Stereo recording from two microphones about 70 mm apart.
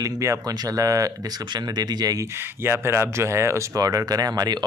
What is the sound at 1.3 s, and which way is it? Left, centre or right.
Speech, right.